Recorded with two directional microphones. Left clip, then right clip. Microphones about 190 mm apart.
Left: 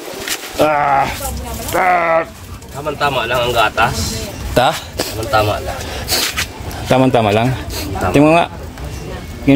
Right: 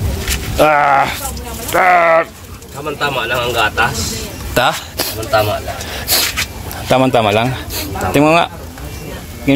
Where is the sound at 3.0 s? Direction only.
45° left (ahead or behind).